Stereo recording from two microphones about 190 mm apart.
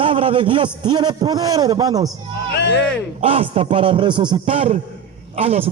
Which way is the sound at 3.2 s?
30° right (ahead or behind).